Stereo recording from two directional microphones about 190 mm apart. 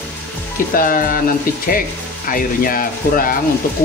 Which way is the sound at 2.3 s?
50° left (ahead or behind).